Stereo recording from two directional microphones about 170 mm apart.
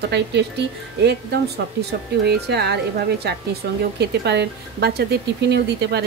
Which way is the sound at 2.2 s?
75° right (ahead or behind).